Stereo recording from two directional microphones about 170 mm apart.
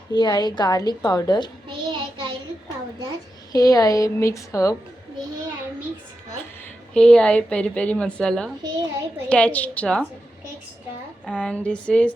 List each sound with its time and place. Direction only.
0.1 s a woman's voice: 25° left (ahead or behind)
1.6 s child singing: 30° right (ahead or behind)
3.5 s a woman's voice: 20° left (ahead or behind)
6.9 s a woman's voice: 5° left (ahead or behind)
11.3 s a woman's voice: 5° left (ahead or behind)